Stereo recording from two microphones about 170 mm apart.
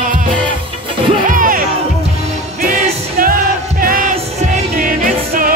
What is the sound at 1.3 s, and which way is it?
Music, 50° right (ahead or behind).